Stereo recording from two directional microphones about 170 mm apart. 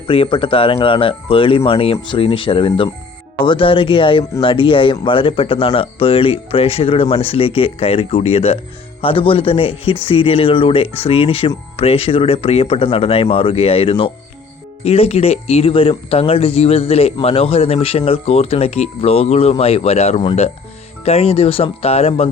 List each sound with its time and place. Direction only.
0.1 s speech: 30° left (ahead or behind)